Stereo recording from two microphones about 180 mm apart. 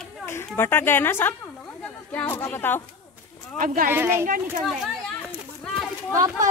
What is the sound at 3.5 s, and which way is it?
Speech, 50° right (ahead or behind).